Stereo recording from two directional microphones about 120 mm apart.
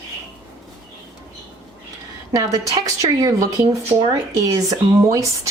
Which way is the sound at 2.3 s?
30° right (ahead or behind).